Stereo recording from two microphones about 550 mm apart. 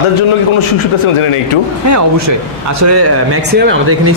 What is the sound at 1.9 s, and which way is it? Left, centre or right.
Speech, right.